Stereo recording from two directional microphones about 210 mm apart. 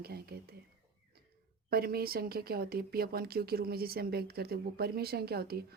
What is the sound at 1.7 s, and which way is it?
A woman's voice, 45° right (ahead or behind).